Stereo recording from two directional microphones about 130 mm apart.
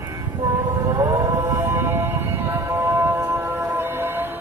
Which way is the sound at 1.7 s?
15° right (ahead or behind).